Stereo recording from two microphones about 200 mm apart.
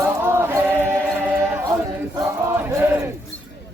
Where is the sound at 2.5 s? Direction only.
10° right (ahead or behind).